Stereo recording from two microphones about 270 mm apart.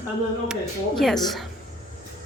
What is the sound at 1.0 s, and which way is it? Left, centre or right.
Speech, centre.